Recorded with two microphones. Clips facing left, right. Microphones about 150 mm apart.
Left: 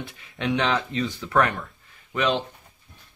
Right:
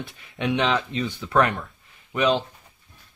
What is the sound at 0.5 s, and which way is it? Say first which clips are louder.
Speech: right 1 dB; 20° right (ahead or behind).